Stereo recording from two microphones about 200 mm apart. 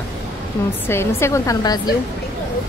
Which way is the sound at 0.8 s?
15° left (ahead or behind).